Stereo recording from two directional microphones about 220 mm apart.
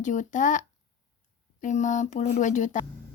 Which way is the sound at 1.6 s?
35° left (ahead or behind).